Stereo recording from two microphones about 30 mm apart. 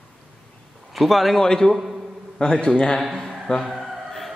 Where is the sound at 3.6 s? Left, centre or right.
Centre.